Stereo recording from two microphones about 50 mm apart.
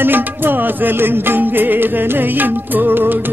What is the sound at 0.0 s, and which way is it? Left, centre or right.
Music, right.